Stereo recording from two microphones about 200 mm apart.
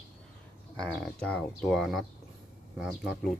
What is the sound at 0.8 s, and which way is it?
Speech, 5° left (ahead or behind).